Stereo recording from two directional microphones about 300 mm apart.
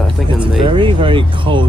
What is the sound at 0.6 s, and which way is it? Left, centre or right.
Speech, centre.